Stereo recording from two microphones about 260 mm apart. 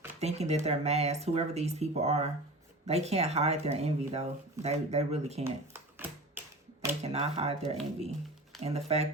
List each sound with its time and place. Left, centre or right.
0.2 s speech: right
5.7 s a sound: centre
7.0 s speech: right